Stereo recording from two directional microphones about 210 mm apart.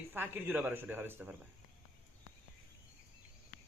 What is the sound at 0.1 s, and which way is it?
Speech, 10° right (ahead or behind).